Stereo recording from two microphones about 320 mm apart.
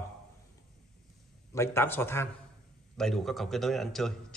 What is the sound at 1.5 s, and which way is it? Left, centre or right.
A man's voice, centre.